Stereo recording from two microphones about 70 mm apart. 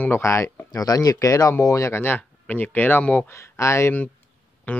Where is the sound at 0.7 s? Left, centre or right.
Left.